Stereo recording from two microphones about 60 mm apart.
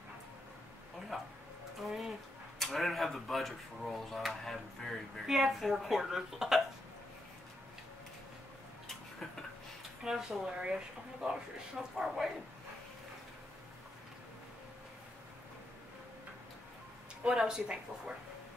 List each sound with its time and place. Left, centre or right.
1.1 s a sound: centre
2.6 s speech: centre
10.0 s speech: centre
17.3 s speech: centre